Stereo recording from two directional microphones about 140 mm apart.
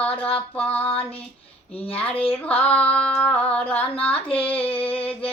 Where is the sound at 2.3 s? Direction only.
10° left (ahead or behind).